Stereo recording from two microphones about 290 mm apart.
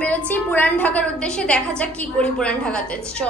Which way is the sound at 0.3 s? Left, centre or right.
Centre.